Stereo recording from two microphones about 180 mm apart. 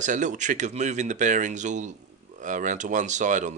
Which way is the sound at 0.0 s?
45° right (ahead or behind).